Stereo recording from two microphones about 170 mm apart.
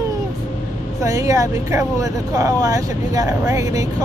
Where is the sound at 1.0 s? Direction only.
20° right (ahead or behind).